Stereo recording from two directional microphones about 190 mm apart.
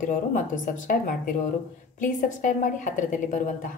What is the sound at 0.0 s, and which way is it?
A woman's voice, 40° left (ahead or behind).